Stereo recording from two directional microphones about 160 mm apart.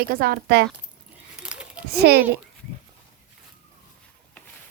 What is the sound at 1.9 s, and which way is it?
Speech, 85° right.